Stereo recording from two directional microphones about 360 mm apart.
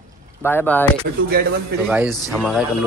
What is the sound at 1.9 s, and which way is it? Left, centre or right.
Speech, centre.